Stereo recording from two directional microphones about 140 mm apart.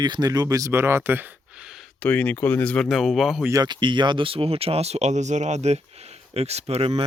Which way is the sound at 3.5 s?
30° right (ahead or behind).